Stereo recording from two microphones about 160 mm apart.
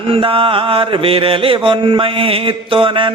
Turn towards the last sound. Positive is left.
turn(degrees=-35)  # may be behind; listen again after turning